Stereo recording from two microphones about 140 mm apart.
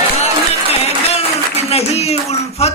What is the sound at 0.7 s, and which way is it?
Speech, 45° left (ahead or behind).